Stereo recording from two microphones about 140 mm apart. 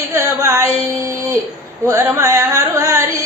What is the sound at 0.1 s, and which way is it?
Music, 20° right (ahead or behind).